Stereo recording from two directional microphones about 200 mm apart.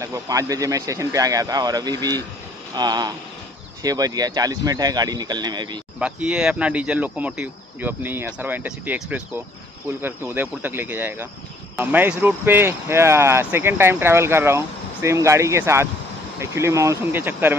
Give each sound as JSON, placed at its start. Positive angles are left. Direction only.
{"t": 0.0, "sound": "speech", "side_deg": -15}
{"t": 5.9, "sound": "speech", "side_deg": -5}